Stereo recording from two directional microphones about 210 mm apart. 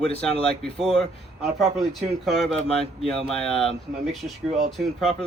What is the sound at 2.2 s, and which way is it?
Speech, centre (ahead or behind).